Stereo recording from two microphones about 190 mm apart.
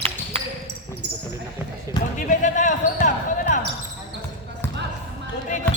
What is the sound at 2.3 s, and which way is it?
Basketball bounce, 40° left (ahead or behind).